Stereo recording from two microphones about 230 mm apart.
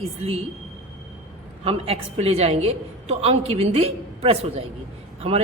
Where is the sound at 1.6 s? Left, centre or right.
Right.